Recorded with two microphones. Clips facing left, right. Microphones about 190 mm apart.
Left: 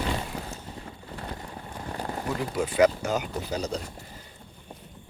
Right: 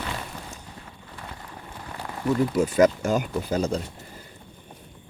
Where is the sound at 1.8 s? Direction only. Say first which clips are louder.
Left 4 dB; 35° left (ahead or behind).